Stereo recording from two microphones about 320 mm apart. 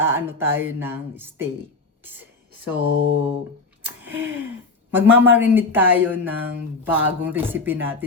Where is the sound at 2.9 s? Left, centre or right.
Left.